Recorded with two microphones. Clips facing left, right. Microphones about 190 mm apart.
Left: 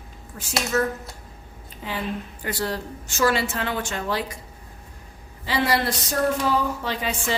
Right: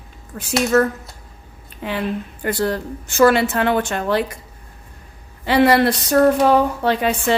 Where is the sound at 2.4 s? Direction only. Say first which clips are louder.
Right 7 dB; 55° right (ahead or behind).